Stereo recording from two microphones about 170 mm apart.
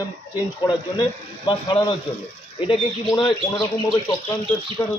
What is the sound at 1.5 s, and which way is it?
Speech, 30° left (ahead or behind).